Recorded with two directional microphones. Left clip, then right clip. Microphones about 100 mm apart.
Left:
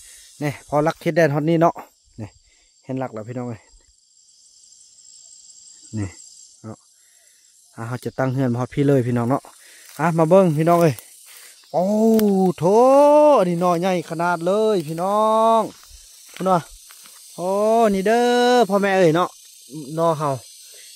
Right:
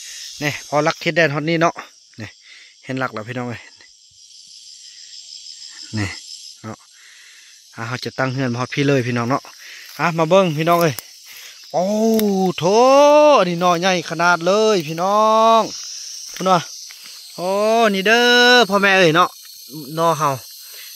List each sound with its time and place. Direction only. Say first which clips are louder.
0.4 s speech: right 2 dB; 25° left (ahead or behind)
0.8 s speech: right 1 dB; 45° left (ahead or behind)
1.7 s speech: even; 20° left (ahead or behind)
3.2 s speech: right 4 dB; 5° right (ahead or behind)
5.9 s cricket: right 6 dB; 10° right (ahead or behind)
7.8 s speech: right 5 dB; 15° left (ahead or behind)
8.3 s speech: right 1 dB; 25° left (ahead or behind)
9.9 s speech: even; 45° left (ahead or behind)
11.3 s a sound: right 1 dB; 25° left (ahead or behind)
12.3 s speech: right 1 dB; 10° left (ahead or behind)
13.0 s speech: right 2 dB; 35° left (ahead or behind); by 14.1 s 20° left (ahead or behind)
14.1 s speech: right 6 dB; 5° left (ahead or behind)